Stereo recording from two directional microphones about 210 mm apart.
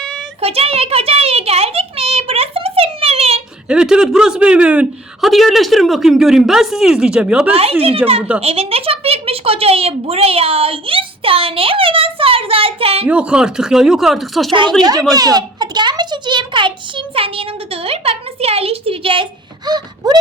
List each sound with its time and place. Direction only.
0.4 s a child's voice: 30° right (ahead or behind)
3.7 s speech: 5° right (ahead or behind)
7.5 s speech: 30° right (ahead or behind)
13.1 s speech: 5° right (ahead or behind)
14.8 s speech: 20° right (ahead or behind)
15.1 s a sound: 20° right (ahead or behind)